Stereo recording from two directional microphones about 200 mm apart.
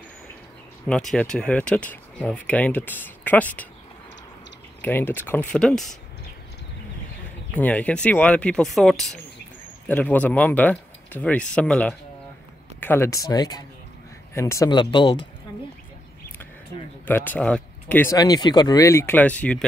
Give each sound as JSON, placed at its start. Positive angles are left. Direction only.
{"t": 0.8, "sound": "speech", "side_deg": 5}
{"t": 4.8, "sound": "speech", "side_deg": 10}
{"t": 7.5, "sound": "speech", "side_deg": 5}
{"t": 17.0, "sound": "speech", "side_deg": 10}